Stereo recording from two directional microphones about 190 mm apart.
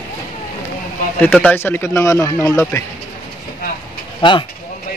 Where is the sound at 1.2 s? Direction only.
10° left (ahead or behind).